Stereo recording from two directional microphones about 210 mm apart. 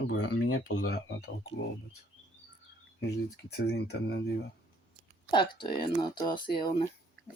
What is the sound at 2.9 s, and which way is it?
Speech, 50° left (ahead or behind).